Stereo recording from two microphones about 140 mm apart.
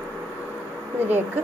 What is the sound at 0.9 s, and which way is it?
Speech, 15° right (ahead or behind).